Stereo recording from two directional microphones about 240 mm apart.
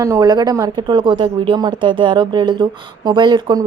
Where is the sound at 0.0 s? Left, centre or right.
Centre.